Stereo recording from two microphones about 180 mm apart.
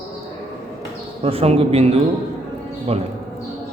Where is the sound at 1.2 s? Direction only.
35° right (ahead or behind).